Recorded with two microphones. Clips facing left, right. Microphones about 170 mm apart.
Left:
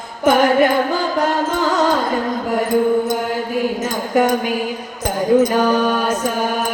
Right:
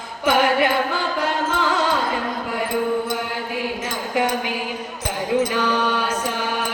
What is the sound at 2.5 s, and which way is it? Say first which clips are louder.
Mantra: left 7 dB; 45° left (ahead or behind).